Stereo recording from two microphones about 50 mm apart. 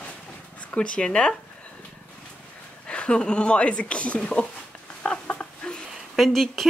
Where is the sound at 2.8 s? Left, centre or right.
Left.